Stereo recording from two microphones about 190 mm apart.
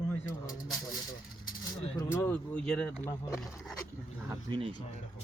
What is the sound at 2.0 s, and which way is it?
Speech, 10° left (ahead or behind).